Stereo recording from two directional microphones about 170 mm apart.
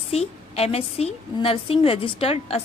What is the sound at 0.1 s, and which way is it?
A woman's voice, 35° left (ahead or behind).